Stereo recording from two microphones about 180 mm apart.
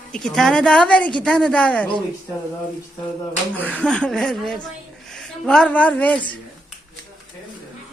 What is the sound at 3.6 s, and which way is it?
A woman's voice, 5° left (ahead or behind).